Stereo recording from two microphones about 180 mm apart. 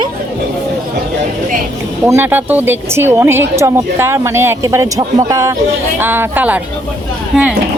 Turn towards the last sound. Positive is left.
turn(degrees=-5)  # may be behind; listen again after turning